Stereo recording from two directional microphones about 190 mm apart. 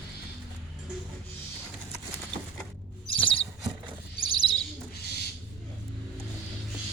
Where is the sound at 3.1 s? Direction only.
25° left (ahead or behind).